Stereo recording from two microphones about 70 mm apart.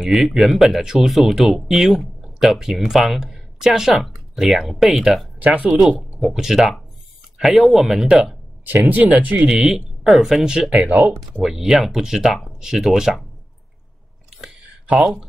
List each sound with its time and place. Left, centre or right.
0.0 s speech: centre
5.4 s speech: right
5.7 s speech: centre
9.2 s speech: right
9.5 s speech: centre
15.0 s speech: centre